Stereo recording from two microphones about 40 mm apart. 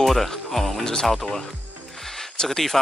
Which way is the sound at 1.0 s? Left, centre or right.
Centre.